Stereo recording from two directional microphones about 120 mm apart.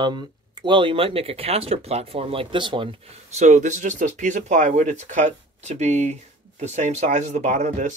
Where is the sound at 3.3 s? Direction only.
80° right.